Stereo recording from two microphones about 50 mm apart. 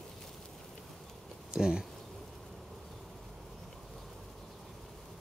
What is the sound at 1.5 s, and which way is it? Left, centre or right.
Speech, centre.